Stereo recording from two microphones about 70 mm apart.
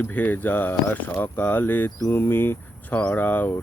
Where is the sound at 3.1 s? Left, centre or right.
Left.